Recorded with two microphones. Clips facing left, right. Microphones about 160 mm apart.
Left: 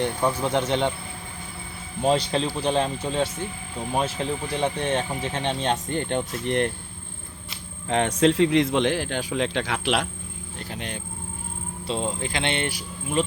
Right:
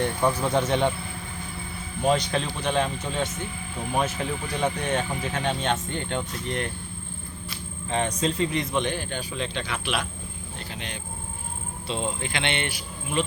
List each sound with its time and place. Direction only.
0.0 s speech: 10° left (ahead or behind)
2.0 s speech: 30° left (ahead or behind)
4.5 s speech: 30° left (ahead or behind)
5.9 s speech: 50° left (ahead or behind)
7.9 s speech: 80° left
10.7 s speech: 50° left (ahead or behind)
11.9 s speech: 35° left (ahead or behind)